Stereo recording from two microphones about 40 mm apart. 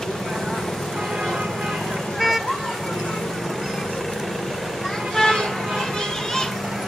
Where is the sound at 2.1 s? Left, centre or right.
Centre.